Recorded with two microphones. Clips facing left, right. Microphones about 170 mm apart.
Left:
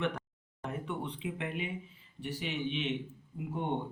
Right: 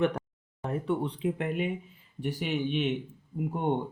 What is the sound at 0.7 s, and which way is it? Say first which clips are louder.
Speech: right 8 dB; 35° right (ahead or behind).